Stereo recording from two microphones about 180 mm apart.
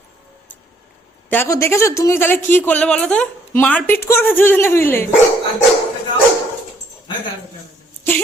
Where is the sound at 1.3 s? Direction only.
15° left (ahead or behind).